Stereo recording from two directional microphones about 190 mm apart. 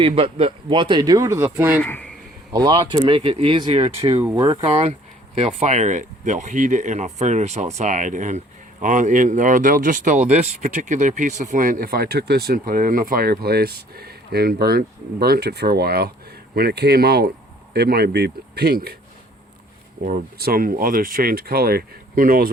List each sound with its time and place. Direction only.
0.0 s speech: 30° right (ahead or behind); by 1.8 s 10° right (ahead or behind)
1.8 s speech: 5° left (ahead or behind)
2.5 s speech: 25° right (ahead or behind)
4.2 s speech: 15° right (ahead or behind)
4.6 s speech: 35° right (ahead or behind); by 18.9 s 55° right (ahead or behind)
20.1 s speech: 45° right (ahead or behind)